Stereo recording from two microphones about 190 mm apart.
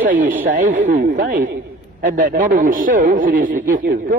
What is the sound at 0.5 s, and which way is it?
A man's voice, 45° right (ahead or behind).